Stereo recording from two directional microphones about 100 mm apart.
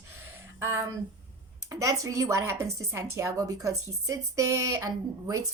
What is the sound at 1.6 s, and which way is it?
Speech, 30° right (ahead or behind).